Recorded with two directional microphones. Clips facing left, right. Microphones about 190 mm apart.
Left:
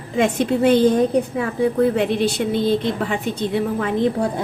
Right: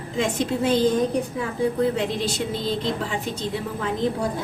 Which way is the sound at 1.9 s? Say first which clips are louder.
Left 6 dB; 60° left (ahead or behind).